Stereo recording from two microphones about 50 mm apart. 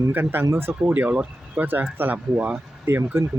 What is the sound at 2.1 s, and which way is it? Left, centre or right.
Speech, right.